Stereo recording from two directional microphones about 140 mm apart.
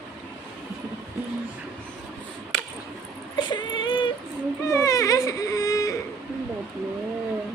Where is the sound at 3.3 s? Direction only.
35° left (ahead or behind).